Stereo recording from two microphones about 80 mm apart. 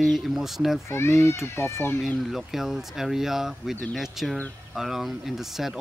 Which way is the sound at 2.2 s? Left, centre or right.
Centre.